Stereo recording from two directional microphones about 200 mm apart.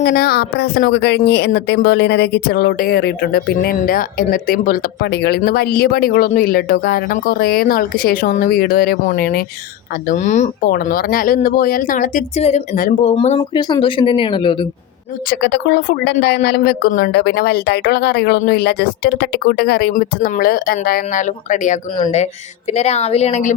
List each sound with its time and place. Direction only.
0.0 s a woman's voice: 50° left (ahead or behind)
10.1 s speech: 35° left (ahead or behind)
10.7 s a woman's voice: 50° left (ahead or behind)
13.5 s speech: 20° left (ahead or behind)
15.3 s a woman's voice: 55° left (ahead or behind); by 23.6 s 35° left (ahead or behind)